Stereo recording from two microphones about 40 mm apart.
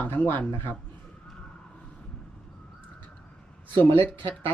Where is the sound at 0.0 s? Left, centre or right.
Left.